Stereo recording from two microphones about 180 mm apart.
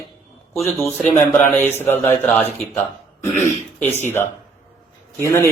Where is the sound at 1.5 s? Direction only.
10° left (ahead or behind).